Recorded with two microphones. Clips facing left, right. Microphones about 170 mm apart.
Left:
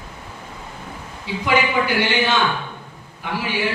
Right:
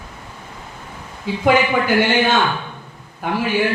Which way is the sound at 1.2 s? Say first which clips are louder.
Right 4 dB; 50° right (ahead or behind).